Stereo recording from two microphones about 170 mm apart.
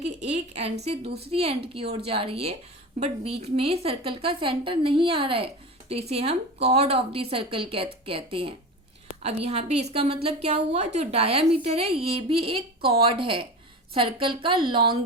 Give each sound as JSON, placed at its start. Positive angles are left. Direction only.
{"t": 0.3, "sound": "a woman's voice", "side_deg": -40}